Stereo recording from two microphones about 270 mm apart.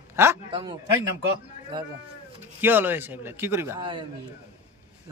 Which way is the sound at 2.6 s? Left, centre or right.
Centre.